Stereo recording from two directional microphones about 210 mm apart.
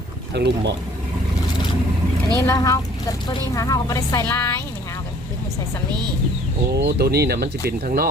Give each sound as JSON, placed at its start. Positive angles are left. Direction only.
{"t": 0.3, "sound": "speech", "side_deg": -55}
{"t": 2.4, "sound": "a woman's voice", "side_deg": 15}
{"t": 6.7, "sound": "speech", "side_deg": -50}